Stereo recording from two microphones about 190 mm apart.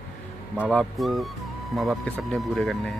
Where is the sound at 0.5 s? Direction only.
Centre (ahead or behind).